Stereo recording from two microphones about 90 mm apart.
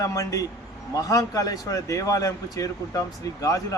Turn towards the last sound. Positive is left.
turn(degrees=40)  # may be behind; listen again after turning